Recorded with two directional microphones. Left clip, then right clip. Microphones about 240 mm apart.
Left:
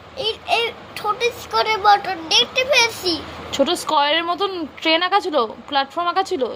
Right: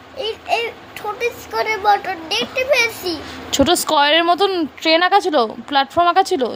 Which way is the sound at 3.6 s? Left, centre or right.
Right.